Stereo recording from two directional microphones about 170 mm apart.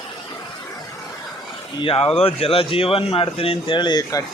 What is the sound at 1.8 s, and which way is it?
Speech, 35° left (ahead or behind).